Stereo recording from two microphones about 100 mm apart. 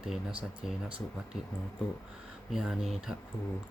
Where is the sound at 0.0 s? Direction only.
5° right (ahead or behind).